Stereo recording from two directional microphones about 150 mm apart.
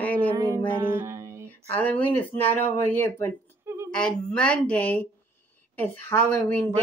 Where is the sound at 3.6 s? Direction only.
15° right (ahead or behind).